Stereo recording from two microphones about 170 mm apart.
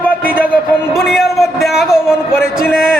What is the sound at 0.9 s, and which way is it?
A man's voice, centre (ahead or behind).